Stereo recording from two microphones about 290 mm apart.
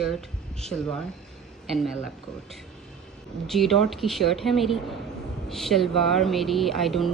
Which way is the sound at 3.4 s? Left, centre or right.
Centre.